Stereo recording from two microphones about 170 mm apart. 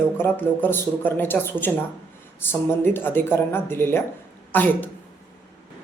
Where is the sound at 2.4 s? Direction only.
15° left (ahead or behind).